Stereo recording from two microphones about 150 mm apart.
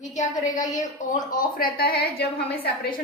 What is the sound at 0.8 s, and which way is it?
Speech, 60° left (ahead or behind).